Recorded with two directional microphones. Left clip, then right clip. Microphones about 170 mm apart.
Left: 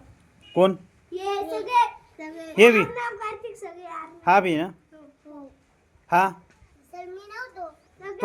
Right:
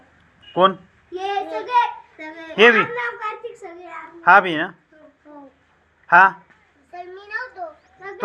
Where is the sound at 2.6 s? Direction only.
40° left (ahead or behind).